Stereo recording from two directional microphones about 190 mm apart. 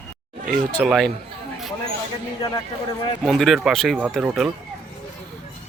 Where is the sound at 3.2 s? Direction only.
Centre (ahead or behind).